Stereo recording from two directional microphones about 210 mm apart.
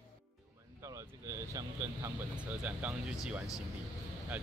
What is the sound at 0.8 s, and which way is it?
Speech, 15° right (ahead or behind).